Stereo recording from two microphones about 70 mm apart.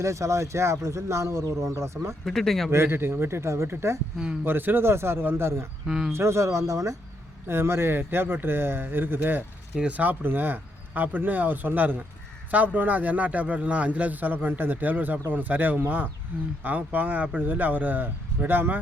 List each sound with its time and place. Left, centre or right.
0.0 s speech: right
2.2 s speech: centre
2.6 s speech: right
7.4 s speech: right
9.7 s a man's voice: centre